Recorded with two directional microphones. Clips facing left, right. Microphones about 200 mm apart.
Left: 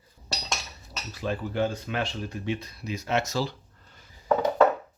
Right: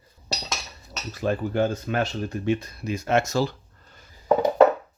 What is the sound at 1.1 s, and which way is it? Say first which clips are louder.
Speech: right 5 dB; 50° right (ahead or behind).